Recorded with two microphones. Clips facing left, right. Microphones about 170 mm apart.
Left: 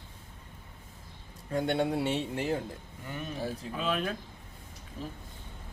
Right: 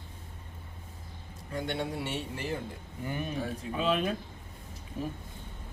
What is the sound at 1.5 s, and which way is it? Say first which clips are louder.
Speech: left 5 dB; 65° left (ahead or behind).